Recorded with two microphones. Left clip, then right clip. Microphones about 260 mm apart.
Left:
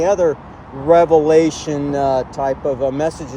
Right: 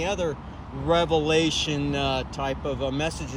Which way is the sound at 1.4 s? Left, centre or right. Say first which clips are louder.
Left 6 dB; centre.